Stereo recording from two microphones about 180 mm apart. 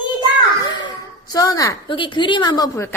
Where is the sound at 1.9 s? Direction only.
25° left (ahead or behind).